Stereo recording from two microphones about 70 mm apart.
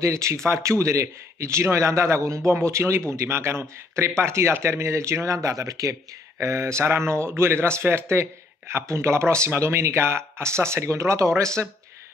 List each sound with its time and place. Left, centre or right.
0.0 s a man's voice: right